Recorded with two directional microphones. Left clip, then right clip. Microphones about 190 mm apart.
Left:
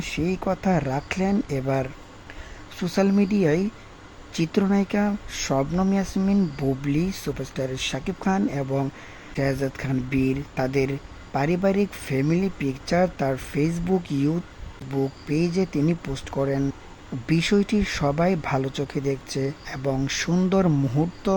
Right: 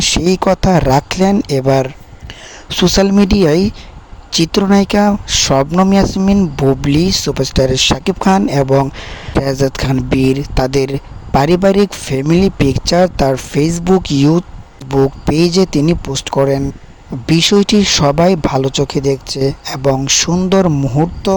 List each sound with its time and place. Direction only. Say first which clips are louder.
0.0 s speech: right 14 dB; 40° right (ahead or behind)